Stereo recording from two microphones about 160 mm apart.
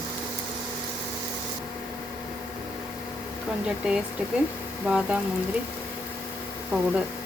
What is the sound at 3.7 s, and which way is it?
Speech, 5° right (ahead or behind).